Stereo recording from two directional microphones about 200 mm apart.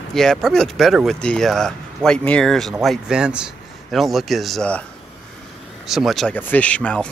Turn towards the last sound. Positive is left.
turn(degrees=5)  # may be behind; listen again after turning